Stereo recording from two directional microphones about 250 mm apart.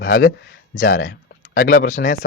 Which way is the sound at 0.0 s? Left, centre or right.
Left.